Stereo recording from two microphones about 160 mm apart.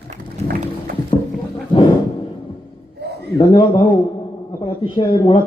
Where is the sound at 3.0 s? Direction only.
90° right.